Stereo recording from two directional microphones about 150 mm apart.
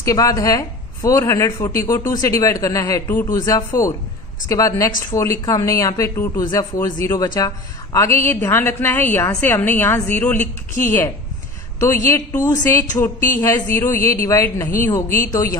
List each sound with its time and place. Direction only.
0.0 s a woman's voice: 25° left (ahead or behind)
11.8 s a man's voice: 20° left (ahead or behind)